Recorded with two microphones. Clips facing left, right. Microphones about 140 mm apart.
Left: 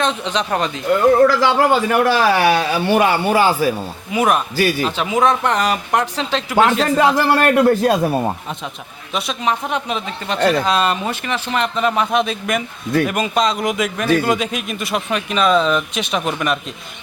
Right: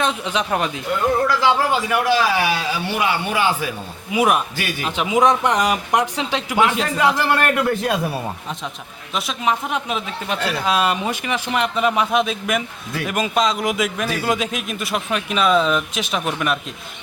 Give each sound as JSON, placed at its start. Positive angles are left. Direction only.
{"t": 0.0, "sound": "speech", "side_deg": -10}
{"t": 1.2, "sound": "a man's voice", "side_deg": 55}
{"t": 4.1, "sound": "speech", "side_deg": -10}
{"t": 4.5, "sound": "a man's voice", "side_deg": 35}
{"t": 4.9, "sound": "speech", "side_deg": -15}
{"t": 7.3, "sound": "a man's voice", "side_deg": 35}
{"t": 9.1, "sound": "speech", "side_deg": 0}